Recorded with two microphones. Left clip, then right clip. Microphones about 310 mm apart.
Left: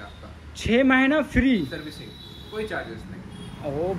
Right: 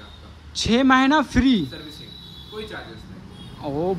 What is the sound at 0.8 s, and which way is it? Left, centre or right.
Speech, centre.